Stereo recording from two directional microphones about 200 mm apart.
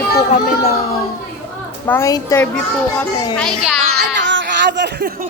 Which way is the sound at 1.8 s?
15° left (ahead or behind).